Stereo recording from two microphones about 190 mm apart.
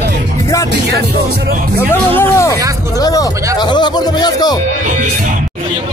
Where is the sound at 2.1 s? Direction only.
15° left (ahead or behind).